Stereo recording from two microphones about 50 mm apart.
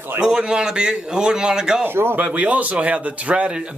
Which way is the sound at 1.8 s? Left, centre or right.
Right.